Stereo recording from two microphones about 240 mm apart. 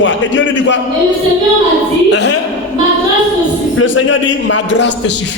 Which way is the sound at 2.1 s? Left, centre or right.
Left.